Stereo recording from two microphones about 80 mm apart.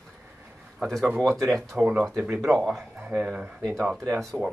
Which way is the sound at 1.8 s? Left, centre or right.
Centre.